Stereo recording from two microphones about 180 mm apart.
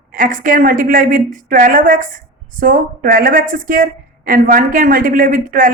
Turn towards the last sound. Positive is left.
turn(degrees=-50)  # may be behind; listen again after turning